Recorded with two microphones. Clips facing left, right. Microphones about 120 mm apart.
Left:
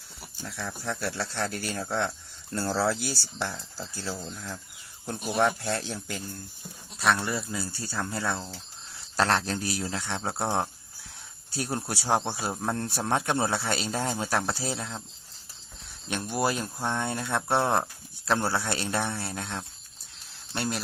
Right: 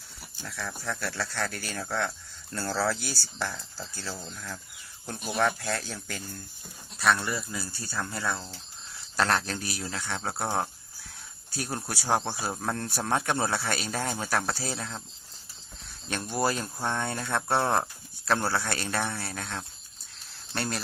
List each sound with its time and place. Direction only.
0.2 s speech: 20° left (ahead or behind)
11.5 s speech: 25° left (ahead or behind)
16.0 s speech: 15° left (ahead or behind)
20.5 s speech: 10° left (ahead or behind)